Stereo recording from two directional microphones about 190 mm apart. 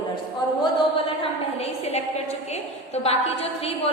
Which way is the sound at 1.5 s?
35° left (ahead or behind).